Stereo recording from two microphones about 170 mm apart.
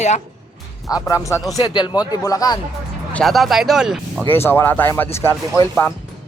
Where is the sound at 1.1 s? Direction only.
20° left (ahead or behind).